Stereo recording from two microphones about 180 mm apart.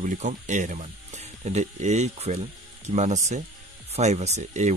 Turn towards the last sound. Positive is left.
turn(degrees=-40)  # may be behind; listen again after turning